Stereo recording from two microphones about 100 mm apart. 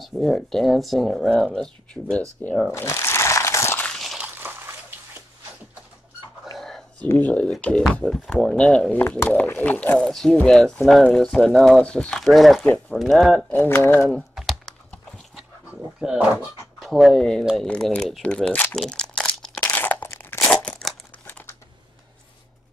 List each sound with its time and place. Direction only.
0.0 s speech: centre (ahead or behind)
2.7 s crumpling: 30° left (ahead or behind)
3.8 s walk: centre (ahead or behind)
4.2 s a sound: 20° right (ahead or behind)
7.2 s speech: 15° left (ahead or behind)
9.2 s speech: 20° left (ahead or behind)
9.9 s speech: 5° left (ahead or behind)
13.5 s speech: 20° left (ahead or behind)
14.1 s typing: centre (ahead or behind)
16.0 s speech: 5° right (ahead or behind); by 18.8 s 15° left (ahead or behind)
18.8 s crumpling: 10° left (ahead or behind)
19.7 s crunch: 20° left (ahead or behind)
20.3 s crumpling: 10° left (ahead or behind)